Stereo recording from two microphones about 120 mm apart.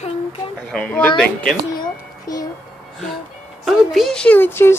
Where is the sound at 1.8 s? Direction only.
30° left (ahead or behind).